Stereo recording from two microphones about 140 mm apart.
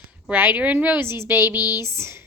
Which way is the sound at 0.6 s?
10° right (ahead or behind).